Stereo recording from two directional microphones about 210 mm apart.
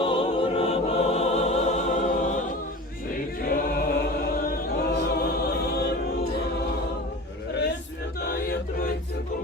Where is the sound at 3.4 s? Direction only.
45° left (ahead or behind).